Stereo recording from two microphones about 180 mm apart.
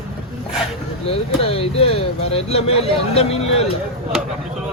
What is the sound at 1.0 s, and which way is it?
Speech, 35° left (ahead or behind).